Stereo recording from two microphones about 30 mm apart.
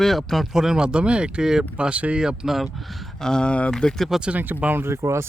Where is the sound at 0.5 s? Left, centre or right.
Centre.